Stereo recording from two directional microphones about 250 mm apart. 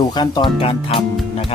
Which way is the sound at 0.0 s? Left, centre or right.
Centre.